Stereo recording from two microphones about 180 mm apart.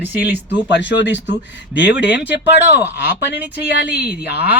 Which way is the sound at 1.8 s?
75° left (ahead or behind).